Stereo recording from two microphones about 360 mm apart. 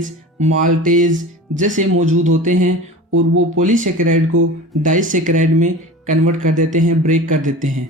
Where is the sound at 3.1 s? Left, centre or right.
Right.